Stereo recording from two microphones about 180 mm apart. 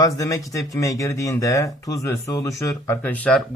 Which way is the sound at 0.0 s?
20° left (ahead or behind).